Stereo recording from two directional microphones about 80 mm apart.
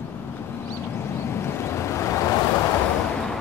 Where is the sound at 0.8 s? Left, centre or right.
Left.